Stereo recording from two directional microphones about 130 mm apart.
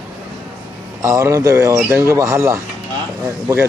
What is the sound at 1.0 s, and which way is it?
Speech, 25° right (ahead or behind).